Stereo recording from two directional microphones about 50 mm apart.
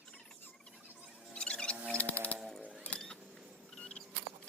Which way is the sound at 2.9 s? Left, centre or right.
Left.